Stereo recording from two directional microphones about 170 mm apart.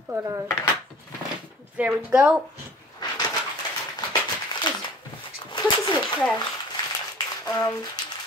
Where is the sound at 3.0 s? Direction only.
25° left (ahead or behind).